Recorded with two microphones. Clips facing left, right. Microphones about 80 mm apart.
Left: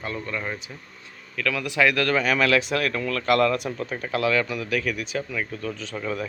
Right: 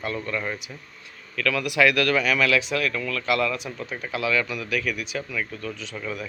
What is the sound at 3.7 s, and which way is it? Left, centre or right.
Speech, left.